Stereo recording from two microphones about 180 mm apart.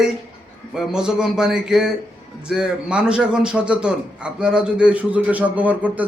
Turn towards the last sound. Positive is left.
turn(degrees=-10)  # may be behind; listen again after turning